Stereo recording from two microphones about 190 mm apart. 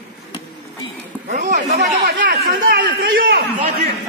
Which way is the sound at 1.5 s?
40° right (ahead or behind).